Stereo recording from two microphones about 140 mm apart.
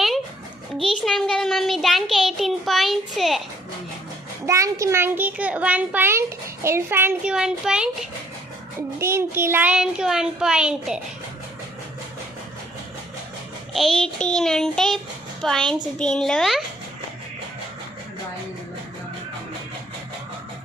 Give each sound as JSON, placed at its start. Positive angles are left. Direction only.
{"t": 0.8, "sound": "child singing", "side_deg": 0}
{"t": 4.4, "sound": "a child's voice", "side_deg": -20}
{"t": 7.3, "sound": "child singing", "side_deg": -5}
{"t": 9.0, "sound": "a child's voice", "side_deg": -20}
{"t": 13.7, "sound": "child singing", "side_deg": 5}